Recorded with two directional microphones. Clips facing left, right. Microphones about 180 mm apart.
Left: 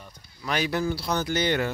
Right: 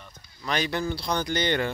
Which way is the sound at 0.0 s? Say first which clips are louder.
Even; 5° left (ahead or behind).